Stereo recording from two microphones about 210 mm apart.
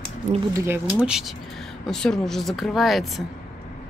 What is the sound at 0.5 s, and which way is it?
Speech, 10° right (ahead or behind).